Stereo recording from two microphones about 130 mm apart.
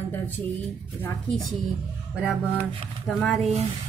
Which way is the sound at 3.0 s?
Centre (ahead or behind).